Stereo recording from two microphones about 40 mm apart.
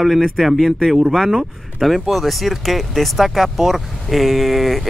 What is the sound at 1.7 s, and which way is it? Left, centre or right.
Speech, centre.